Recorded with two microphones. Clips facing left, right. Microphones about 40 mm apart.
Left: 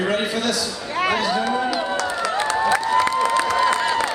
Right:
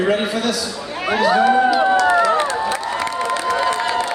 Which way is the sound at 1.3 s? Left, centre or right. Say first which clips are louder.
Right 8 dB; right.